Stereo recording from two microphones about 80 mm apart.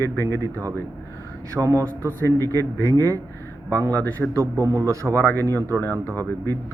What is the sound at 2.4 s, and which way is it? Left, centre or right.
A man's voice, right.